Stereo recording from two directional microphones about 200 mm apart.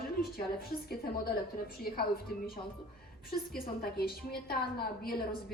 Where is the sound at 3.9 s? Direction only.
50° left (ahead or behind).